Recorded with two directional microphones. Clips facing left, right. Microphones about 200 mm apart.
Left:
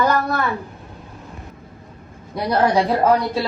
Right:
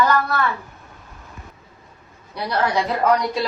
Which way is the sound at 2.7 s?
30° left (ahead or behind).